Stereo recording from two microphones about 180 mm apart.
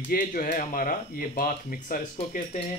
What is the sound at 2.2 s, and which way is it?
Speech, 35° left (ahead or behind).